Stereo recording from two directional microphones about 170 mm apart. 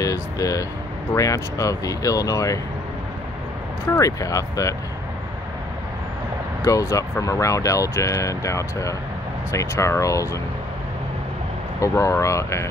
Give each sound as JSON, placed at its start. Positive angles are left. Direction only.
{"t": 0.0, "sound": "a sound", "side_deg": 20}
{"t": 1.1, "sound": "speech", "side_deg": 20}
{"t": 3.9, "sound": "speech", "side_deg": 20}
{"t": 6.6, "sound": "speech", "side_deg": 20}
{"t": 11.8, "sound": "speech", "side_deg": 15}